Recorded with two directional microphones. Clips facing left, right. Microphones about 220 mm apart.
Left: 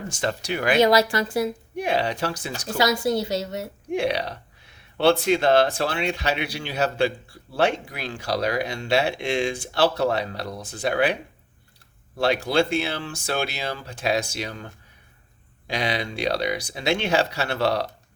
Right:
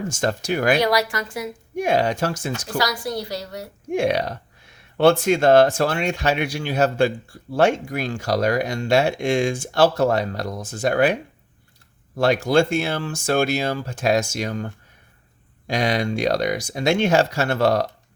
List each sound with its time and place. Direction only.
0.1 s speech: 45° right (ahead or behind)
0.8 s a woman's voice: 25° left (ahead or behind)
1.7 s speech: 45° right (ahead or behind)
2.6 s a woman's voice: 25° left (ahead or behind)
3.9 s speech: 45° right (ahead or behind)